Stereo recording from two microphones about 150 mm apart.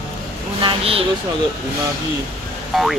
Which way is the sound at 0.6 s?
35° right (ahead or behind).